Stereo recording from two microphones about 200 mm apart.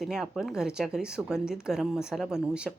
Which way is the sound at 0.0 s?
Centre (ahead or behind).